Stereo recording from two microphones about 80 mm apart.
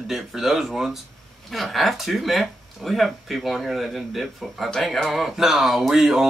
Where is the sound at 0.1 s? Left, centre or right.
Centre.